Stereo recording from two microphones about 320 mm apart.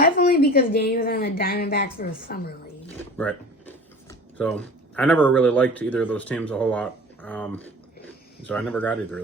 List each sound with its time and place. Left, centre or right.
0.0 s a woman's voice: left
2.8 s speech: centre